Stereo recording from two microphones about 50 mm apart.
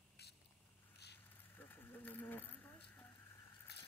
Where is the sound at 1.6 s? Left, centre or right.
Left.